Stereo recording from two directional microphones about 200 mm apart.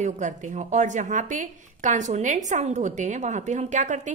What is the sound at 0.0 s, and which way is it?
A woman's voice, 35° right (ahead or behind).